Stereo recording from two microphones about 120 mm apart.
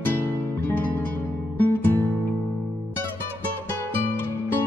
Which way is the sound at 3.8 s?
15° left (ahead or behind).